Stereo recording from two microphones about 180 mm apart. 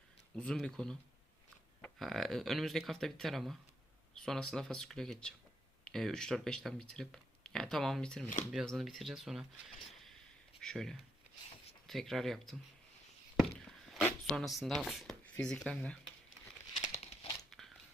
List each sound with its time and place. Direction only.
0.3 s speech: 5° left (ahead or behind)
10.6 s speech: 5° left (ahead or behind)
14.0 s speech: centre (ahead or behind)
16.8 s crumpling: 35° left (ahead or behind)